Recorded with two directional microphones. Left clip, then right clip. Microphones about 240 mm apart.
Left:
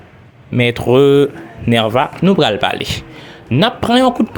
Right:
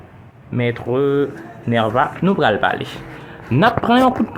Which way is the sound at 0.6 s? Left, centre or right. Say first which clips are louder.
Left 8 dB; left.